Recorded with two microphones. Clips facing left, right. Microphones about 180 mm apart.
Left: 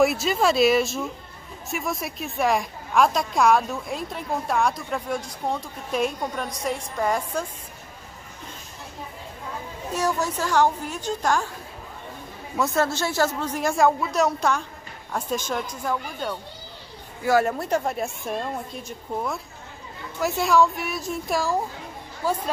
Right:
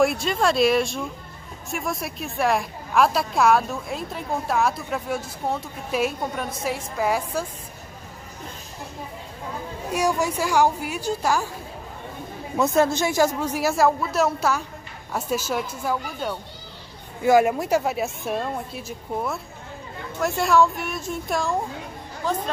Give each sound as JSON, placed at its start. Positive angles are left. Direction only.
{"t": 0.0, "sound": "a woman's voice", "side_deg": 5}
{"t": 9.8, "sound": "speech", "side_deg": -10}
{"t": 12.5, "sound": "a woman's voice", "side_deg": -20}